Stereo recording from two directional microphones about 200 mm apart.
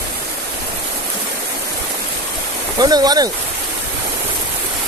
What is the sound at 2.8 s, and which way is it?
Speech, 20° right (ahead or behind).